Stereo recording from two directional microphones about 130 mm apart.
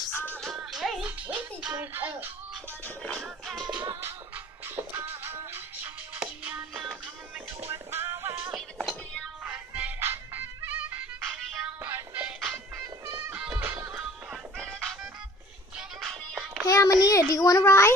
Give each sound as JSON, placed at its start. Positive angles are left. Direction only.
{"t": 0.1, "sound": "music", "side_deg": 15}
{"t": 0.6, "sound": "music", "side_deg": 0}
{"t": 3.0, "sound": "music", "side_deg": 5}
{"t": 4.7, "sound": "music", "side_deg": -15}
{"t": 7.7, "sound": "music", "side_deg": -20}
{"t": 8.5, "sound": "music", "side_deg": 0}
{"t": 9.4, "sound": "music", "side_deg": -10}
{"t": 11.5, "sound": "music", "side_deg": -5}
{"t": 13.0, "sound": "music", "side_deg": -20}
{"t": 16.6, "sound": "a sound", "side_deg": 25}
{"t": 17.3, "sound": "a child's voice", "side_deg": 25}